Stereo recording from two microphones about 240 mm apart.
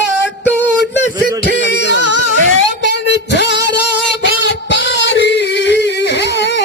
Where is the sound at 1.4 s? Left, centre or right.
Left.